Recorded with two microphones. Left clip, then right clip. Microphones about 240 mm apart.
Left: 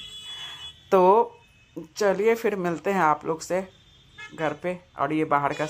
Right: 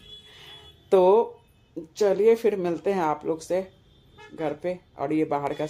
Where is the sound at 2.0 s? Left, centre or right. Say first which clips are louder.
Right 2 dB; centre.